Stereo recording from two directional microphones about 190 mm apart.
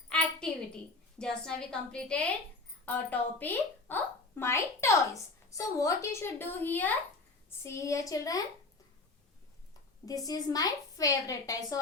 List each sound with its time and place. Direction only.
0.1 s a sound: 5° left (ahead or behind)
1.2 s a woman's voice: 5° left (ahead or behind)
10.1 s a woman's voice: 20° left (ahead or behind)